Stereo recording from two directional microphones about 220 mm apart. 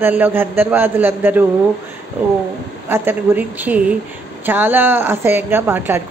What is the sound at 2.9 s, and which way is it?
A woman's voice, 10° right (ahead or behind).